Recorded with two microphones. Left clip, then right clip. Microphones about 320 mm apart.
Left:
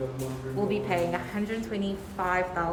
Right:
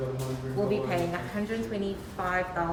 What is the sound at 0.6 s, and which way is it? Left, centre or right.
Speech, centre.